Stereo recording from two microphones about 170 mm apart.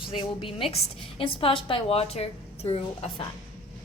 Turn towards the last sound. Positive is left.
turn(degrees=35)  # may be behind; listen again after turning